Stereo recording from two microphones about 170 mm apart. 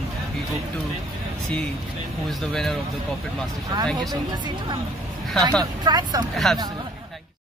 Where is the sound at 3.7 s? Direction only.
25° right (ahead or behind).